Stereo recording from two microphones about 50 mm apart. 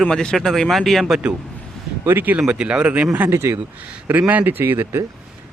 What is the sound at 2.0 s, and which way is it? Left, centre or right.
Speech, right.